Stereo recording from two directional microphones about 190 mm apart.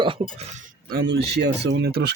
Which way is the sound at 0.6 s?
50° right (ahead or behind).